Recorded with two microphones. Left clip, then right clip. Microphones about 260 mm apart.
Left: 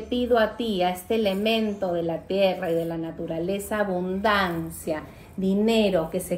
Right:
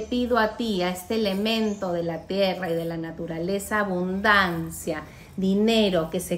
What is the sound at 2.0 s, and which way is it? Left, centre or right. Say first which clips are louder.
A woman's voice: left 2 dB; right.